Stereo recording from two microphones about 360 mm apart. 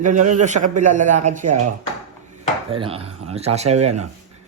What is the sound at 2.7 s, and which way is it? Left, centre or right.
Speech, centre.